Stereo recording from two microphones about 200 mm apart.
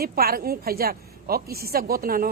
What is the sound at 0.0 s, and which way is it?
Speech, 50° right (ahead or behind).